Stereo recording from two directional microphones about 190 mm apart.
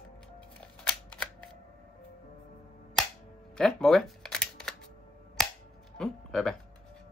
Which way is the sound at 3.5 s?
Centre (ahead or behind).